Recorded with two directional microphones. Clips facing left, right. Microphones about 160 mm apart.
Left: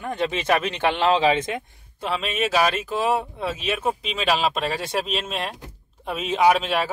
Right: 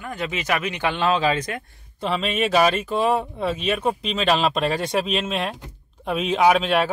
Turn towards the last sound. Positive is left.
turn(degrees=0)  # may be behind; listen again after turning